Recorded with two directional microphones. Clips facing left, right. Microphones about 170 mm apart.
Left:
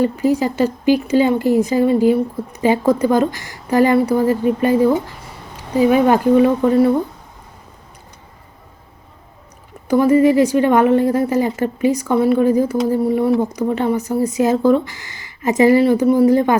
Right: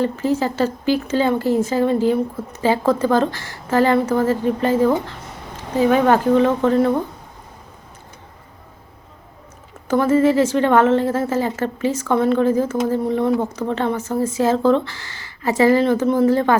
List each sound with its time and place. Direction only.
0.0 s a woman's voice: 15° left (ahead or behind)
9.9 s a woman's voice: 15° left (ahead or behind)